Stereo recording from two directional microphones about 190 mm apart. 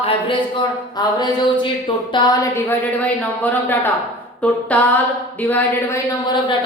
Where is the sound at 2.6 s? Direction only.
10° left (ahead or behind).